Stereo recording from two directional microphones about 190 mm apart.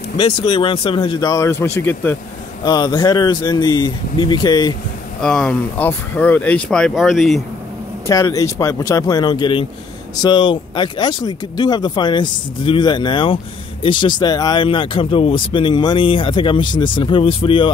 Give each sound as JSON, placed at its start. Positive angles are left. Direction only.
{"t": 0.2, "sound": "speech", "side_deg": 25}
{"t": 2.6, "sound": "speech", "side_deg": 20}
{"t": 5.2, "sound": "speech", "side_deg": 5}
{"t": 8.1, "sound": "speech", "side_deg": 15}